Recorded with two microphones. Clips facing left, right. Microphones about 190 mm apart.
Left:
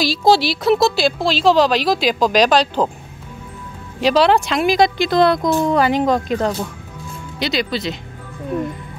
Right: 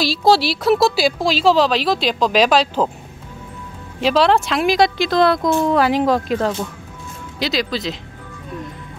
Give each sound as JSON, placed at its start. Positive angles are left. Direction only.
{"t": 0.0, "sound": "speech", "side_deg": 0}
{"t": 4.0, "sound": "speech", "side_deg": 0}